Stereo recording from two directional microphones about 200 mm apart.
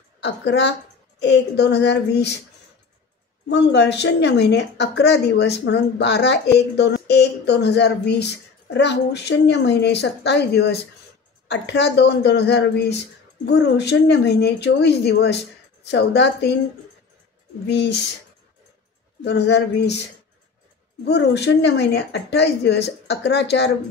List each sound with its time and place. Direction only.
0.2 s a woman's voice: 60° left (ahead or behind)
3.4 s a woman's voice: 60° left (ahead or behind)
17.6 s a woman's voice: 60° left (ahead or behind)
19.2 s a woman's voice: 60° left (ahead or behind)
21.0 s a woman's voice: 60° left (ahead or behind)